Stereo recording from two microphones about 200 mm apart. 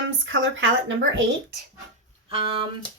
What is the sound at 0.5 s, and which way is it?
Speech, 75° right (ahead or behind).